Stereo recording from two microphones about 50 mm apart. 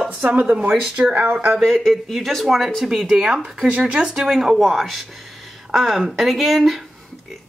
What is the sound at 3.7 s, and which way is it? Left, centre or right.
Speech, right.